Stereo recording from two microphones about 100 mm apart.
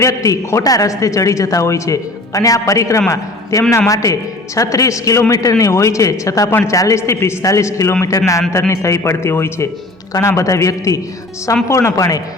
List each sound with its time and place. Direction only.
0.0 s a man's voice: 35° left (ahead or behind)
6.5 s a woman's voice: 20° left (ahead or behind)